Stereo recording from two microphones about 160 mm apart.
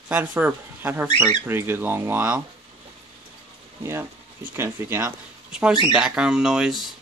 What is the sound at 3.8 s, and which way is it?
Speech, 15° right (ahead or behind).